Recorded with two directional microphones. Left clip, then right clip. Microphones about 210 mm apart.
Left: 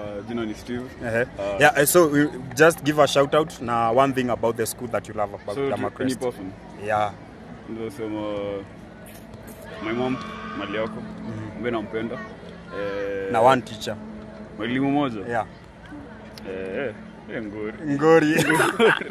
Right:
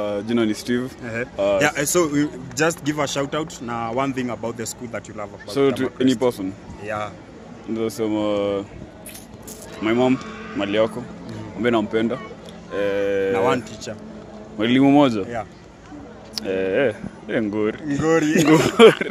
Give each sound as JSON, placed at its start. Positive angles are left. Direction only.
{"t": 0.0, "sound": "speech", "side_deg": -55}
{"t": 1.0, "sound": "speech", "side_deg": 30}
{"t": 5.5, "sound": "speech", "side_deg": -55}
{"t": 6.8, "sound": "speech", "side_deg": 25}
{"t": 7.7, "sound": "speech", "side_deg": -50}
{"t": 9.8, "sound": "speech", "side_deg": -50}
{"t": 13.3, "sound": "speech", "side_deg": 35}
{"t": 14.6, "sound": "speech", "side_deg": -45}
{"t": 16.3, "sound": "speech", "side_deg": -55}
{"t": 17.8, "sound": "speech", "side_deg": 30}
{"t": 18.8, "sound": "speech", "side_deg": -60}